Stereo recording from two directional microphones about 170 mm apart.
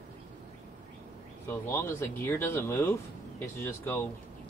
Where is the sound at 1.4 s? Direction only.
15° left (ahead or behind).